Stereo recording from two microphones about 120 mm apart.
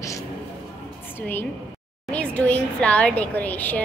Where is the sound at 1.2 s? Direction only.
20° left (ahead or behind).